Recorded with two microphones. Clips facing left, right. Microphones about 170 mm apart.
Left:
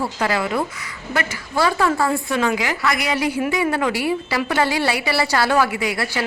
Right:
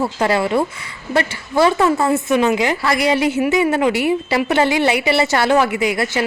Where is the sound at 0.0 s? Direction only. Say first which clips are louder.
Right 4 dB; 30° right (ahead or behind).